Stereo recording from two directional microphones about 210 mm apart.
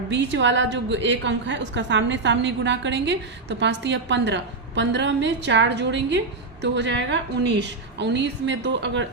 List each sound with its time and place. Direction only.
0.1 s a woman's voice: 55° right (ahead or behind)